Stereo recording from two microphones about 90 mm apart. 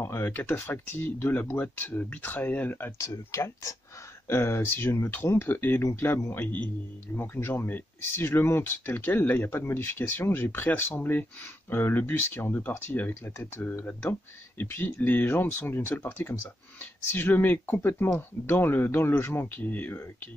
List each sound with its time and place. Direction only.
0.0 s speech: 25° left (ahead or behind)
3.0 s speech: 35° left (ahead or behind); by 20.2 s 20° left (ahead or behind)